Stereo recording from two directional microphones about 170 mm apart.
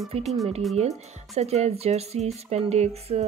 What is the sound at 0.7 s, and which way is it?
Speech, 40° right (ahead or behind).